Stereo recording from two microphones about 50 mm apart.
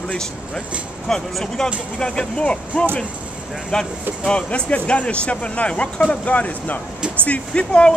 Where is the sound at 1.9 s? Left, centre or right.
Centre.